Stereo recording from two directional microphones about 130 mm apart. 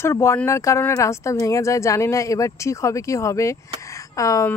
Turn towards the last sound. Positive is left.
turn(degrees=25)  # may be behind; listen again after turning